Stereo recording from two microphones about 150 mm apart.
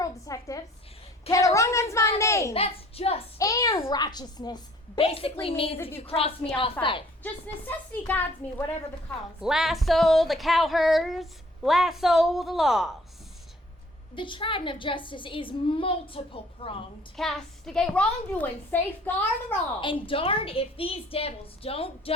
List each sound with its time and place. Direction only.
0.0 s a sound: 25° left (ahead or behind)
1.3 s a child's voice: 20° left (ahead or behind)
2.5 s a child's voice: 40° left (ahead or behind)
3.3 s a child's voice: 20° left (ahead or behind)
5.0 s a woman's voice: 40° left (ahead or behind)
5.7 s a woman's voice: 15° left (ahead or behind)
6.0 s a woman's voice: 40° left (ahead or behind)
8.0 s a woman's voice: 15° left (ahead or behind)
9.4 s a sound: 5° right (ahead or behind)
14.2 s a woman's voice: 35° left (ahead or behind)
17.2 s a woman's voice: 5° left (ahead or behind)
19.8 s a woman's voice: 35° left (ahead or behind)